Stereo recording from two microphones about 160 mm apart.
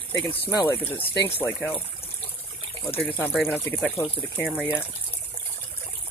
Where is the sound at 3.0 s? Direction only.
10° left (ahead or behind).